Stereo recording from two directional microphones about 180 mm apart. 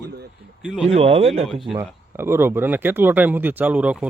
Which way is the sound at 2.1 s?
10° right (ahead or behind).